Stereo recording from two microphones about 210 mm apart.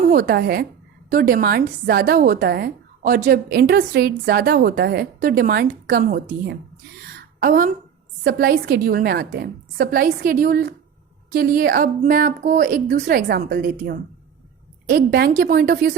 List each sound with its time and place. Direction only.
0.1 s a woman's voice: 45° right (ahead or behind)
7.3 s a woman's voice: 45° right (ahead or behind)